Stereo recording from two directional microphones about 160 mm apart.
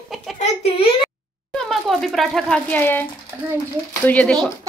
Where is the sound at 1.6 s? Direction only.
Centre (ahead or behind).